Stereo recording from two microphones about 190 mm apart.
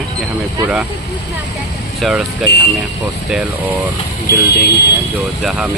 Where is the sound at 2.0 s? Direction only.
Centre (ahead or behind).